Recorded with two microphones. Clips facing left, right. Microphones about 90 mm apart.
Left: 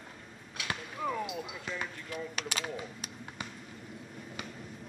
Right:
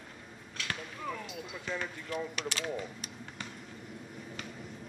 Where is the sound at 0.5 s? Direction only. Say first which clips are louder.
Left 2 dB; 10° left (ahead or behind).